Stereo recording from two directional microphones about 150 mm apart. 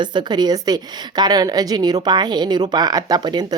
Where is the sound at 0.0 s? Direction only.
30° right (ahead or behind).